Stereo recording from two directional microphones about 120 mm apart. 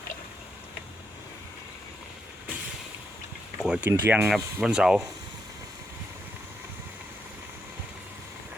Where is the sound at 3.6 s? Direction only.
5° right (ahead or behind).